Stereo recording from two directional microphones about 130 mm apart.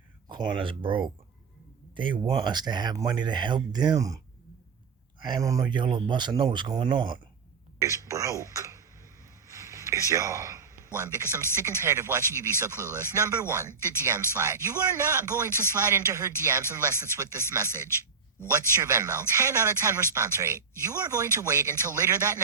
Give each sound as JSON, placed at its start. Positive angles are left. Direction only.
{"t": 0.3, "sound": "speech", "side_deg": -35}
{"t": 5.2, "sound": "speech", "side_deg": -30}
{"t": 7.8, "sound": "a sound", "side_deg": -25}
{"t": 10.9, "sound": "speech", "side_deg": -15}